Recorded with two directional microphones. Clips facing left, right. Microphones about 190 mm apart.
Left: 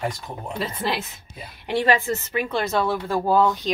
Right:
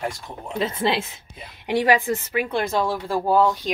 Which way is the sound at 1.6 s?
15° right (ahead or behind).